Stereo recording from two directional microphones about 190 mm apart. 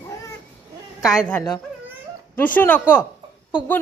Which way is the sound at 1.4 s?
20° left (ahead or behind).